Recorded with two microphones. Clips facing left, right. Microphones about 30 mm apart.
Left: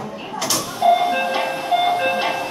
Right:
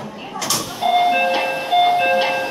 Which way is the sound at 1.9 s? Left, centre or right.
Right.